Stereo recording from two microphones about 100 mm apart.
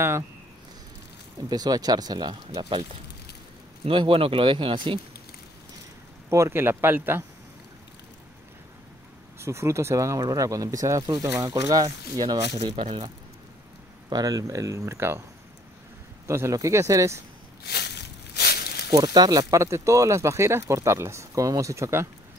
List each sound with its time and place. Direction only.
1.5 s speech: 40° right (ahead or behind)
3.8 s speech: 60° right (ahead or behind)
6.3 s speech: 25° right (ahead or behind)
9.4 s speech: 30° right (ahead or behind)
11.2 s speech: 20° right (ahead or behind)
11.5 s speech: 35° right (ahead or behind)
12.4 s speech: 50° right (ahead or behind)
14.0 s speech: 40° right (ahead or behind)
16.3 s speech: 30° right (ahead or behind)
18.9 s speech: 45° right (ahead or behind)